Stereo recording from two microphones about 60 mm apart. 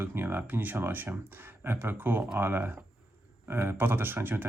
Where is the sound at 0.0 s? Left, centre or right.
Right.